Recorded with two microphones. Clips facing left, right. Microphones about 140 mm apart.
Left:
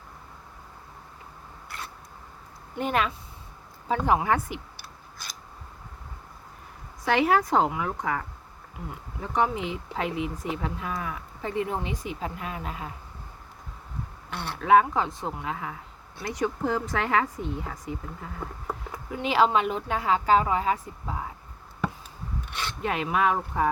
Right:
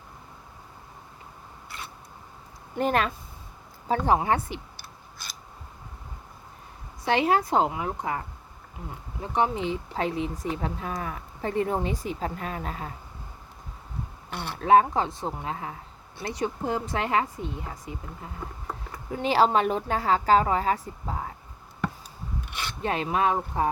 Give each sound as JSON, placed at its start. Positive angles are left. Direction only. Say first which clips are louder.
{"t": 2.7, "sound": "a woman's voice", "louder": "right 2 dB", "side_deg": -40}
{"t": 5.1, "sound": "scissors", "louder": "left 1 dB", "side_deg": 0}
{"t": 7.0, "sound": "a woman's voice", "louder": "left 1 dB", "side_deg": -25}
{"t": 9.2, "sound": "speech", "louder": "right 1 dB", "side_deg": -25}
{"t": 14.3, "sound": "speech", "louder": "even", "side_deg": -5}
{"t": 14.6, "sound": "a woman's voice", "louder": "right 1 dB", "side_deg": -35}
{"t": 19.1, "sound": "speech", "louder": "right 1 dB", "side_deg": -35}
{"t": 22.8, "sound": "speech", "louder": "even", "side_deg": -30}